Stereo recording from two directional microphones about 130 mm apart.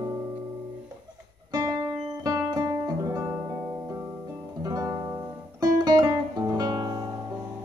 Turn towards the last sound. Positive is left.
turn(degrees=-30)  # may be behind; listen again after turning